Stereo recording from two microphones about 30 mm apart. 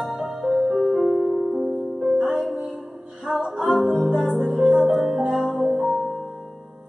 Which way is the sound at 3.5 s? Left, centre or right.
Centre.